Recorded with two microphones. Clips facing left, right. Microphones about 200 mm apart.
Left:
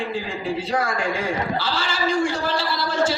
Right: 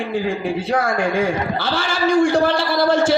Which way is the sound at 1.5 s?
55° right (ahead or behind).